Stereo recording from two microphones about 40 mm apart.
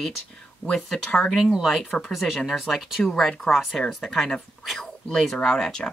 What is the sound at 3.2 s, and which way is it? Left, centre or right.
Speech, centre.